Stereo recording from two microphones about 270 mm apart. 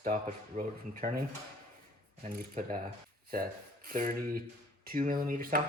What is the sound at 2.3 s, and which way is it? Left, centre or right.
Speech, right.